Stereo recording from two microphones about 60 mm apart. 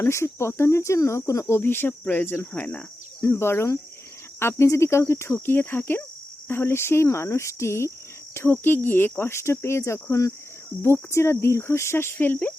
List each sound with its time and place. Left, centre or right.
0.0 s speech: left
1.6 s speech: left
2.6 s speech: left
3.2 s speech: left
10.8 s speech: left